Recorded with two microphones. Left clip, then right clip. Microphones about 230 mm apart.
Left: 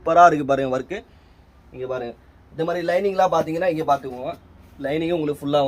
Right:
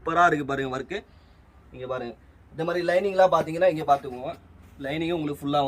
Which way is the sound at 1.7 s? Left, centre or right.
Centre.